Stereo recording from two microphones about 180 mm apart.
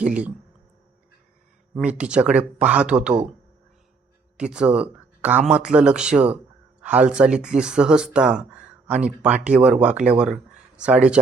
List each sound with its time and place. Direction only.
0.0 s speech: 5° right (ahead or behind)
1.7 s speech: 5° right (ahead or behind)
4.4 s speech: 5° right (ahead or behind)